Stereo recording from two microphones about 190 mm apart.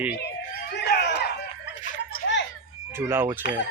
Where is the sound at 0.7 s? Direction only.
60° left (ahead or behind).